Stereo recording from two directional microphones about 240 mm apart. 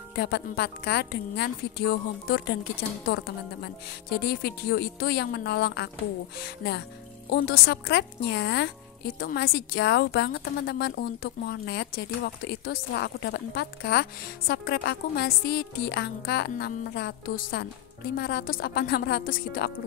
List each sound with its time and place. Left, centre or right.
0.1 s a woman's voice: left